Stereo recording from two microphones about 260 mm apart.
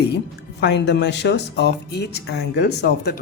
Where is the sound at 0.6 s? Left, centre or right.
Left.